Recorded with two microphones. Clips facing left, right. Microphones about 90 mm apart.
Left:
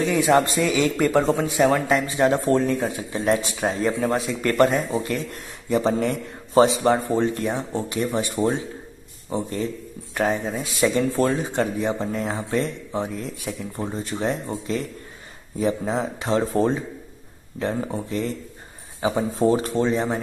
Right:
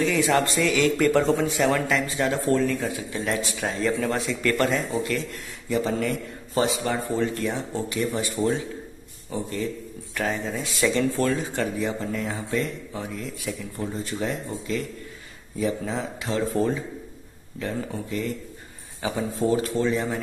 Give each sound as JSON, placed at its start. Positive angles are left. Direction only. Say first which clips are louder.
{"t": 0.0, "sound": "a man's voice", "louder": "left 3 dB", "side_deg": 20}
{"t": 9.3, "sound": "speech", "louder": "left 3 dB", "side_deg": 30}